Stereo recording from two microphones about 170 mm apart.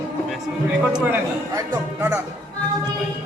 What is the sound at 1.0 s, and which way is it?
Speech, 15° right (ahead or behind).